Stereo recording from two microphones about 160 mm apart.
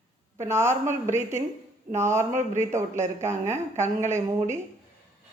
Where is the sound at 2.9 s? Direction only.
45° right (ahead or behind).